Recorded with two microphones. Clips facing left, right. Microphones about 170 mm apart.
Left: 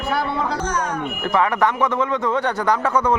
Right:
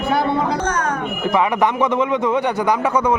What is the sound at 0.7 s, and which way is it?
Speech, 55° right (ahead or behind).